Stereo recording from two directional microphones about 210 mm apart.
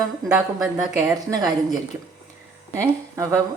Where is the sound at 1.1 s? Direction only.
20° right (ahead or behind).